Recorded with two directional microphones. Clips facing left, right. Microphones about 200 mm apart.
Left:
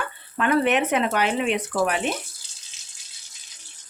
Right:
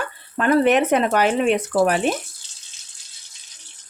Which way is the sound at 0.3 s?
40° right (ahead or behind).